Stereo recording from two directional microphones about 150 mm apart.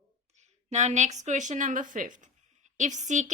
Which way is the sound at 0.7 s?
50° right (ahead or behind).